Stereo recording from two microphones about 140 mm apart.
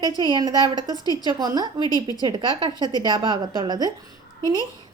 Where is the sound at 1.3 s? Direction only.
30° right (ahead or behind).